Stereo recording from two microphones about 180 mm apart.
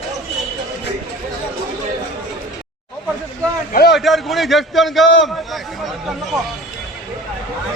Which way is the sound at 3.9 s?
Centre (ahead or behind).